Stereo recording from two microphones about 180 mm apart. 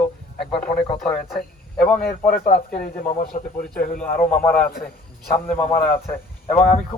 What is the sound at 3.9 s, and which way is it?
A man's voice, 10° left (ahead or behind).